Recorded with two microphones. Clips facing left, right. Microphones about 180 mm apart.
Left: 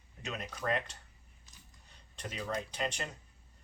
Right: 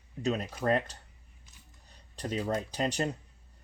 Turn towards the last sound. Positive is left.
turn(degrees=-35)  # may be behind; listen again after turning